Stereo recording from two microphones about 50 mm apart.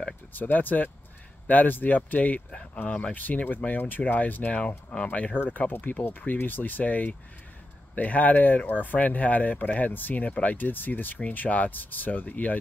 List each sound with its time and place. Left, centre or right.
0.3 s speech: left